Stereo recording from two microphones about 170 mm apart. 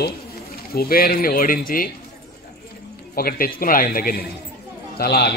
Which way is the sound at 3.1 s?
60° left (ahead or behind).